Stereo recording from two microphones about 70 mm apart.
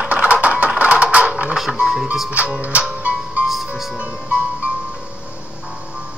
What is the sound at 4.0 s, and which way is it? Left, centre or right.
Music, centre.